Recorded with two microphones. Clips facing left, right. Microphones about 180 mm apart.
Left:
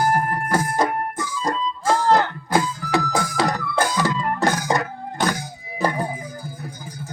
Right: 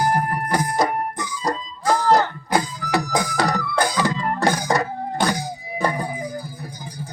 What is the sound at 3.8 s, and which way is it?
Organ, 15° right (ahead or behind).